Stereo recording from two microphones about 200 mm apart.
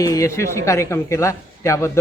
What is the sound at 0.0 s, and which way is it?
Speech, 15° left (ahead or behind).